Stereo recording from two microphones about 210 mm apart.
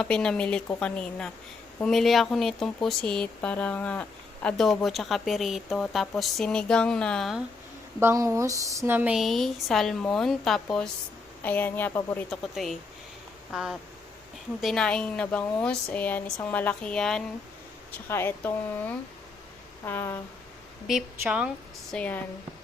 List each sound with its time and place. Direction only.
0.0 s speech: 5° left (ahead or behind)
7.9 s a woman's voice: 15° right (ahead or behind); by 20.2 s 10° left (ahead or behind)
20.8 s speech: 5° right (ahead or behind)
21.9 s a woman's voice: 5° left (ahead or behind)